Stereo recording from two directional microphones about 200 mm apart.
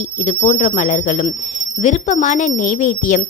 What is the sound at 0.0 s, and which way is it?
A woman's voice, 35° left (ahead or behind).